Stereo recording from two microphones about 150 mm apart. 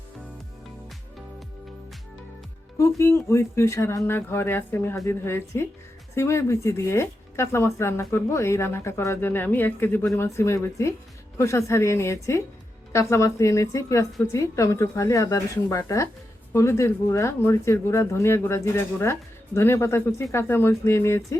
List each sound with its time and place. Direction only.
2.7 s a woman's voice: 20° left (ahead or behind)